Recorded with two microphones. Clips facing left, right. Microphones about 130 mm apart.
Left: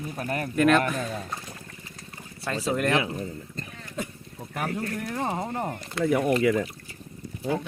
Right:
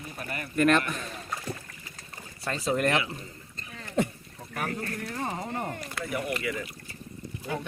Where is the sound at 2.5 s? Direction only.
Centre (ahead or behind).